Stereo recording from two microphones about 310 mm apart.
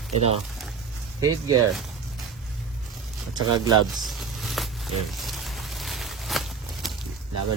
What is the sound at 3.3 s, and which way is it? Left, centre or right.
Speech, centre.